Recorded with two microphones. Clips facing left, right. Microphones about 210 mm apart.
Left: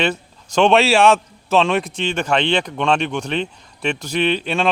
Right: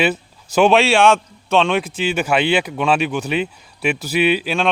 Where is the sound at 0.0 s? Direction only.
5° right (ahead or behind).